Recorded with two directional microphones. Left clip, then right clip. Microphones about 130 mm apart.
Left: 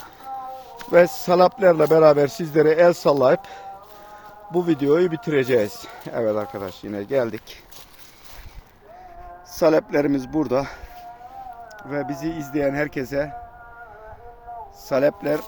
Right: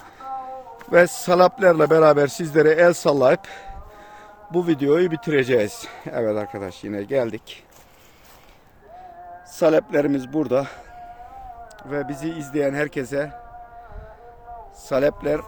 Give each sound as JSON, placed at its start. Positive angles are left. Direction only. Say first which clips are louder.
{"t": 0.2, "sound": "a sound", "louder": "right 2 dB", "side_deg": -20}
{"t": 0.9, "sound": "a man's voice", "louder": "even", "side_deg": -30}
{"t": 4.5, "sound": "speech", "louder": "even", "side_deg": -25}
{"t": 7.2, "sound": "a man's voice", "louder": "left 1 dB", "side_deg": -10}
{"t": 9.6, "sound": "a man's voice", "louder": "even", "side_deg": -10}
{"t": 11.8, "sound": "speech", "louder": "even", "side_deg": 0}
{"t": 14.8, "sound": "speech", "louder": "even", "side_deg": -5}